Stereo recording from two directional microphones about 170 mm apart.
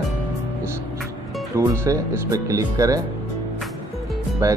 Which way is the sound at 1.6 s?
20° right (ahead or behind).